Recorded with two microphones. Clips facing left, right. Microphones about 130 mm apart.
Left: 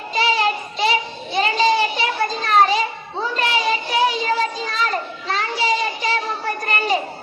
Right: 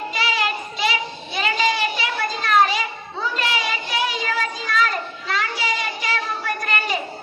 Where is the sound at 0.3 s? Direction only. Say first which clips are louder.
Left 4 dB; 35° left (ahead or behind).